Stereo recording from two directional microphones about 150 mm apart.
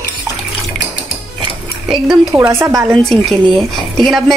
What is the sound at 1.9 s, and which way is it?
Speech, 5° right (ahead or behind).